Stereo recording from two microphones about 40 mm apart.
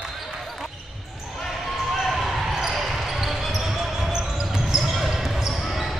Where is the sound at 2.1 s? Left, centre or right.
Centre.